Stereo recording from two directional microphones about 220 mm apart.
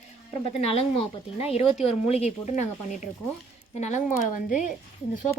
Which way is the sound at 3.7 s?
30° left (ahead or behind).